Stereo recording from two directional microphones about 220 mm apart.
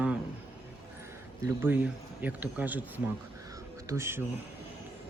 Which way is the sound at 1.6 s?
5° right (ahead or behind).